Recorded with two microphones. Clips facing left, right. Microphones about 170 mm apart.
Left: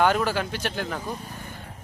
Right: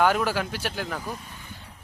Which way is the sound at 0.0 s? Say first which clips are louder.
Left 1 dB; 5° right (ahead or behind).